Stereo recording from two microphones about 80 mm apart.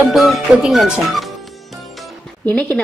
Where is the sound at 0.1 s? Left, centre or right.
Centre.